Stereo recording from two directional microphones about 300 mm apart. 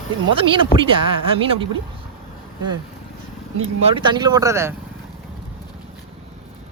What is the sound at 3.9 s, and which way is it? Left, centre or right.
Speech, centre.